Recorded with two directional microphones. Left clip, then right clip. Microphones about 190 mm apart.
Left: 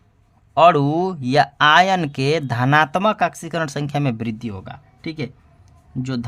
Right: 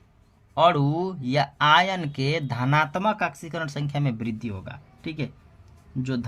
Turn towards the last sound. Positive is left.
turn(degrees=45)  # may be behind; listen again after turning